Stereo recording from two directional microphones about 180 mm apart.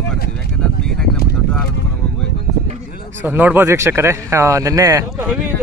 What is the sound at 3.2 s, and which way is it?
A man's voice, 10° right (ahead or behind).